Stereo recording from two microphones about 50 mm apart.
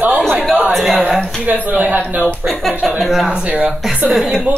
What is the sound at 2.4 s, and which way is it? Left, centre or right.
Speech, centre.